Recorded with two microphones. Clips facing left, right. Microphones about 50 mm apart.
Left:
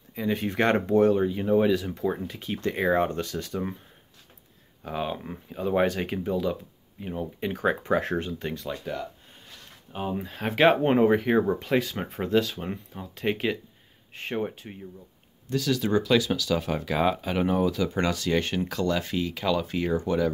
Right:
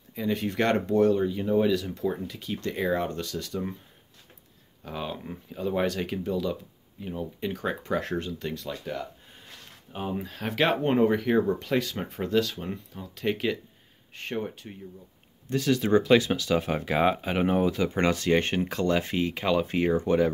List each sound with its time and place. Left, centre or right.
0.1 s speech: centre
4.8 s speech: centre
8.9 s speech: centre
10.2 s speech: left
15.5 s speech: right